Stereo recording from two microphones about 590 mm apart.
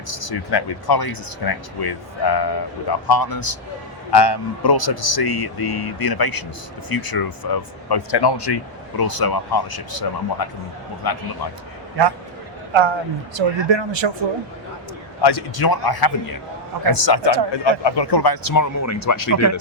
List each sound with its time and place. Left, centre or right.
0.1 s speech: left
12.7 s speech: right
15.2 s speech: left